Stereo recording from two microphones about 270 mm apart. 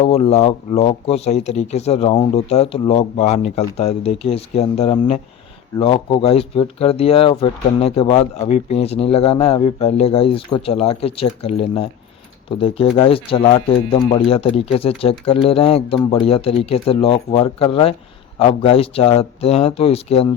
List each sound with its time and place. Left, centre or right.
0.0 s speech: left